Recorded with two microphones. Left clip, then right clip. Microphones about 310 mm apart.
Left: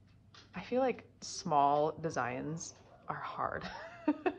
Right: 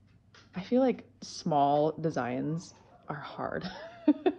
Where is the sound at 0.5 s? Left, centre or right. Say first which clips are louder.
Right 5 dB; centre.